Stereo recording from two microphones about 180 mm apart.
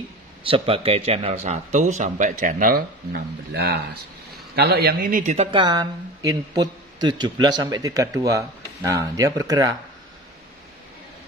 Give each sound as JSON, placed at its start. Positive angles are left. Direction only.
{"t": 0.4, "sound": "a man's voice", "side_deg": -30}